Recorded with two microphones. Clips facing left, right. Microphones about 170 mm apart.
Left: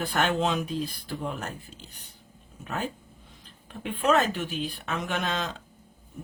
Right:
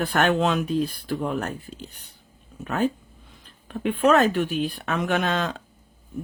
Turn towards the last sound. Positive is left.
turn(degrees=-60)  # may be behind; listen again after turning